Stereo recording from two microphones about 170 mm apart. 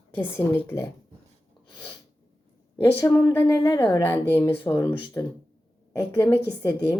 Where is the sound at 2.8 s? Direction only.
15° left (ahead or behind).